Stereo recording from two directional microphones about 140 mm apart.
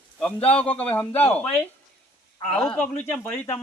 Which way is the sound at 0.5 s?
10° left (ahead or behind).